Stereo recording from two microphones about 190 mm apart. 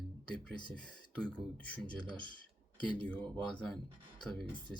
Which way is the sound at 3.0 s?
5° left (ahead or behind).